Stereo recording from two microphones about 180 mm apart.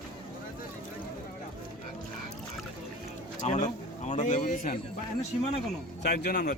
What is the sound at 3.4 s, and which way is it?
A man's voice, 40° left (ahead or behind).